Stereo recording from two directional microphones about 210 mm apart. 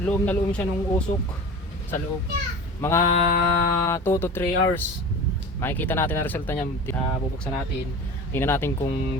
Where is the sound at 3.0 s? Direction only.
40° left (ahead or behind).